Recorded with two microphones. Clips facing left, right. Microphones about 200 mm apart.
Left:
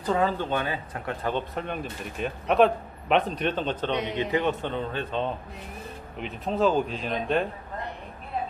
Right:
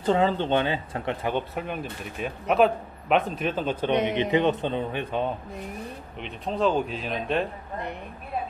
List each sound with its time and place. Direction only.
0.0 s speech: 25° right (ahead or behind)
1.2 s speech: 10° right (ahead or behind)
4.1 s speech: 20° right (ahead or behind)
6.1 s speech: centre (ahead or behind)